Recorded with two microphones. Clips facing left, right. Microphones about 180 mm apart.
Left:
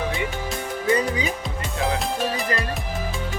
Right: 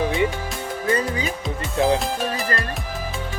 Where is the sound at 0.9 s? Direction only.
15° left (ahead or behind).